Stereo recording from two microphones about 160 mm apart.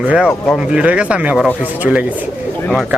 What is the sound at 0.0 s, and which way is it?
Speech, 10° right (ahead or behind).